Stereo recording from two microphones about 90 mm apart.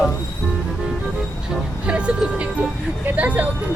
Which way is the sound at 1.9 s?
10° right (ahead or behind).